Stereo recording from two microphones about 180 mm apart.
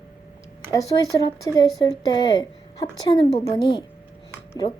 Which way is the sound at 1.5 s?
20° left (ahead or behind).